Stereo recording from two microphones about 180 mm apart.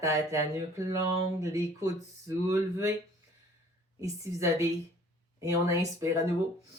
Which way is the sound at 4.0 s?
15° right (ahead or behind).